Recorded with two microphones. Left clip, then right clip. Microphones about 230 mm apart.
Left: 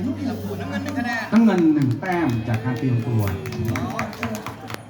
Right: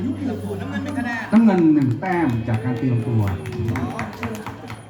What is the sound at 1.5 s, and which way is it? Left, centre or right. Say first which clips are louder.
Speech: right 2 dB; centre.